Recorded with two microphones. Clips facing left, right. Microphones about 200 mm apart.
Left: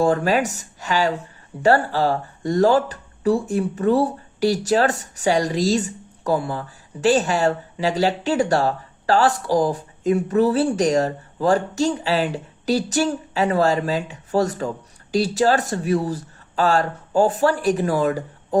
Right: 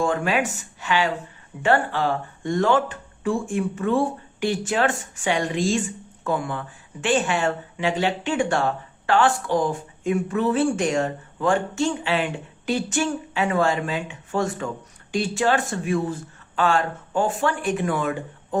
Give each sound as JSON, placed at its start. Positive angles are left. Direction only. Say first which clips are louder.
{"t": 0.0, "sound": "speech", "louder": "left 4 dB", "side_deg": 40}